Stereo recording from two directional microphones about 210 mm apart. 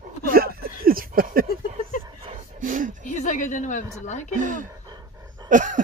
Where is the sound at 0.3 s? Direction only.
45° right (ahead or behind).